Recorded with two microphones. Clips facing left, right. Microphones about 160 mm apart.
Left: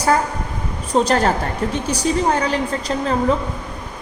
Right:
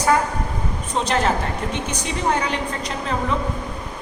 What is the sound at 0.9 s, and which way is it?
Speech, 40° left (ahead or behind).